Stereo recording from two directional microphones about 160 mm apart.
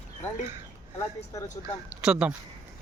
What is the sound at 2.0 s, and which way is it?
Speech, 5° right (ahead or behind).